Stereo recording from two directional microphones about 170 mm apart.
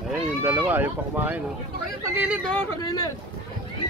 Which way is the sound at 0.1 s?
10° right (ahead or behind).